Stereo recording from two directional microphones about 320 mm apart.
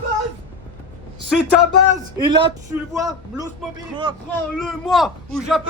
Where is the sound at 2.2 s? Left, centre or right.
Centre.